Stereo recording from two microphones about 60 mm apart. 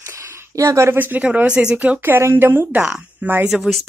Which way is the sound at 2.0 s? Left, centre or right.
Right.